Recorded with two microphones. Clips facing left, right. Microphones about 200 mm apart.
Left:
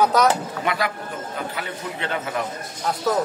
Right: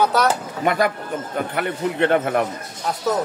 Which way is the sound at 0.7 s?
45° right (ahead or behind).